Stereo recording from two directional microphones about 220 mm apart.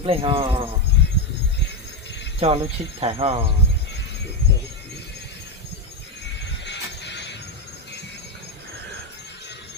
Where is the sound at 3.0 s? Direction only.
25° right (ahead or behind).